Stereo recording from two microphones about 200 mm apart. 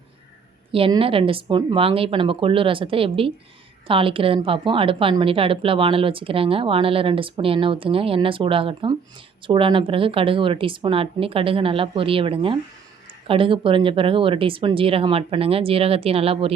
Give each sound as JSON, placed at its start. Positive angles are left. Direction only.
{"t": 0.7, "sound": "a woman's voice", "side_deg": -25}